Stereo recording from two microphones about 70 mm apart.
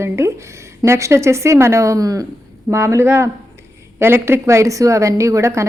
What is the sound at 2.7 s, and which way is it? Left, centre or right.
A woman's voice, right.